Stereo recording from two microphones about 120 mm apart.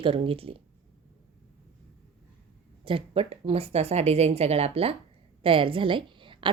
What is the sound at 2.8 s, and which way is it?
A woman's voice, 50° right (ahead or behind).